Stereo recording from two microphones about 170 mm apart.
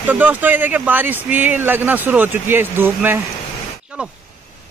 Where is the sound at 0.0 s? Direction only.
10° right (ahead or behind).